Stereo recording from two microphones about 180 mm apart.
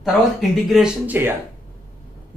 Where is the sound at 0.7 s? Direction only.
5° right (ahead or behind).